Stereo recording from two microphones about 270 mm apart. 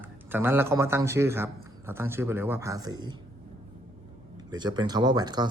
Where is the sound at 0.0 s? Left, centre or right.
Centre.